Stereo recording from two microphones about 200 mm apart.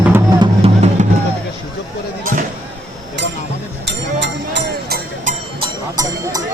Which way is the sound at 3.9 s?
60° right (ahead or behind).